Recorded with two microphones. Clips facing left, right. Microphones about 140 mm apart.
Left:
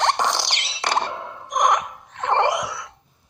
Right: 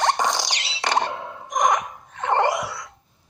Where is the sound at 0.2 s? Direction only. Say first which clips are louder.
Even; 65° left (ahead or behind).